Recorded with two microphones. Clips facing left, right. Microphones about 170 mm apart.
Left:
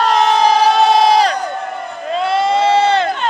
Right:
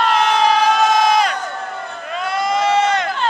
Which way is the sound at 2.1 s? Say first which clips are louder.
Left 5 dB; 30° left (ahead or behind).